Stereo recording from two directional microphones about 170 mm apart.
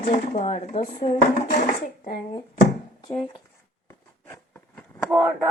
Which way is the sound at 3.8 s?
15° left (ahead or behind).